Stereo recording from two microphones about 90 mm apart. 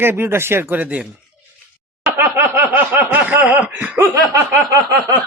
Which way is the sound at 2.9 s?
20° right (ahead or behind).